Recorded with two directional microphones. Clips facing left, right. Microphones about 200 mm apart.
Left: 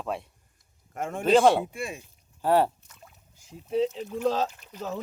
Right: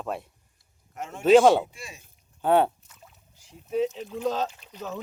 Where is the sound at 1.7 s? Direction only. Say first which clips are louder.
Left 10 dB; 55° left (ahead or behind).